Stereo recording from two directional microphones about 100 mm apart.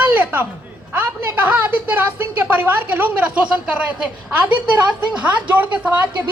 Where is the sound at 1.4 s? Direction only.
15° right (ahead or behind).